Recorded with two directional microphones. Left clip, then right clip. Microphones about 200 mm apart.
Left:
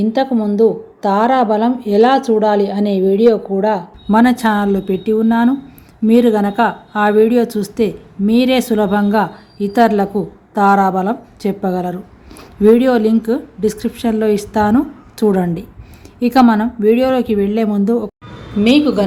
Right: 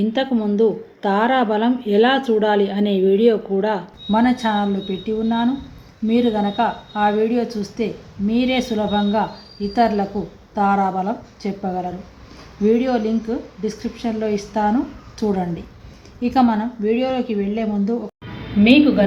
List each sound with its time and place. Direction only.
0.0 s a woman's voice: 35° left (ahead or behind)